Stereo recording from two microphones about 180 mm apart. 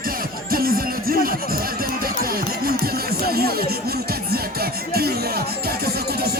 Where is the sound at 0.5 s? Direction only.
55° right (ahead or behind).